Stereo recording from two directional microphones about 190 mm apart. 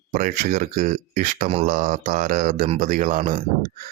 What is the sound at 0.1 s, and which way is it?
Speech, 45° right (ahead or behind).